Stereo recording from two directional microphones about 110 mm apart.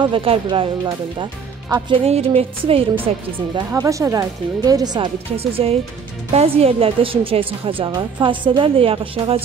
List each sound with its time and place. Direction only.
0.0 s a woman's voice: 55° right (ahead or behind)
0.8 s speech: 40° right (ahead or behind)
2.0 s a woman's voice: 70° right (ahead or behind)
3.8 s speech: 30° right (ahead or behind)
5.4 s a woman's voice: 65° right (ahead or behind)